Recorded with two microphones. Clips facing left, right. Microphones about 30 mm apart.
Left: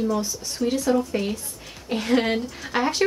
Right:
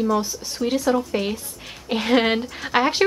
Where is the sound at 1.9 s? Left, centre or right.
Right.